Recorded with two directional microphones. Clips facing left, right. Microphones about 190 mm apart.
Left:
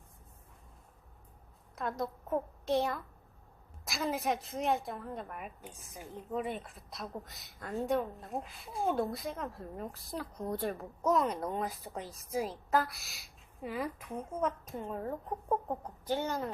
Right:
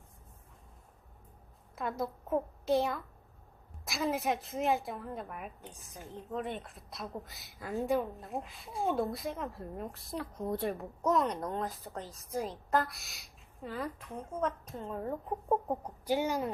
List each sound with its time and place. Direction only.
1.7 s a woman's voice: centre (ahead or behind)
15.8 s a woman's voice: 15° right (ahead or behind)